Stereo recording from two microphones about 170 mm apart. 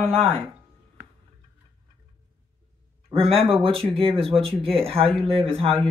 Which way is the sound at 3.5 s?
30° right (ahead or behind).